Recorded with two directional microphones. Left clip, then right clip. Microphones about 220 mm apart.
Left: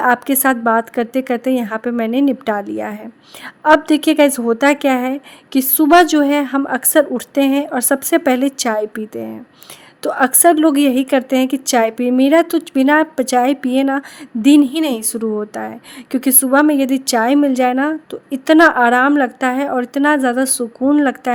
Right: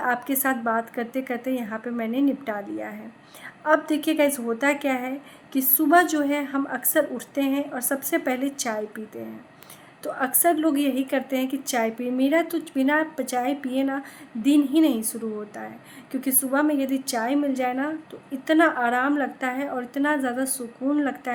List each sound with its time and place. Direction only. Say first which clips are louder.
0.0 s a woman's voice: left 10 dB; 45° left (ahead or behind)
10.0 s a woman's voice: left 11 dB; 45° left (ahead or behind)